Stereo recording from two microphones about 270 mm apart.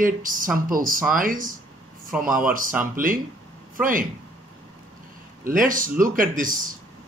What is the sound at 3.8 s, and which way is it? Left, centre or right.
Speech, right.